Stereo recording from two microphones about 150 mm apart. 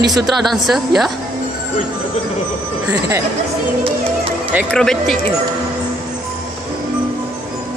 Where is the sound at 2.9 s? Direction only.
20° right (ahead or behind).